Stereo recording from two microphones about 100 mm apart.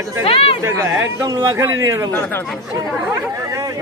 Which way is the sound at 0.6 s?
25° right (ahead or behind).